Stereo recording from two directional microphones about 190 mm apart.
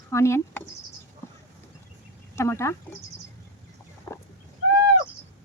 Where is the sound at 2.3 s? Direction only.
15° left (ahead or behind).